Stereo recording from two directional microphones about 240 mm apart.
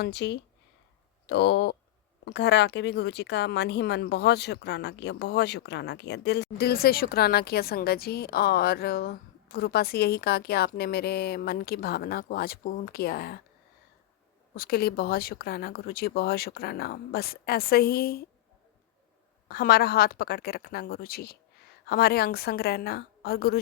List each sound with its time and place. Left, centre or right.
0.0 s speech: left
14.5 s speech: left
19.5 s speech: left